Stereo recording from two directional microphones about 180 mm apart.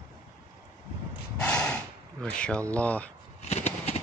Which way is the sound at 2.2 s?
5° left (ahead or behind).